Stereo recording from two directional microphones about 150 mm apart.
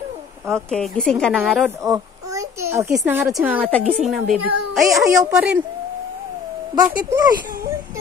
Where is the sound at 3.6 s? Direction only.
10° left (ahead or behind); by 5.6 s 5° right (ahead or behind).